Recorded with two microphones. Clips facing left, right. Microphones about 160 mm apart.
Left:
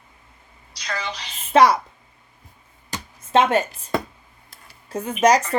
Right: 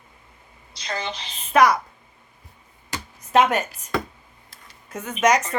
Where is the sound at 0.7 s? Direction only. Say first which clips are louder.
Even; 25° right (ahead or behind).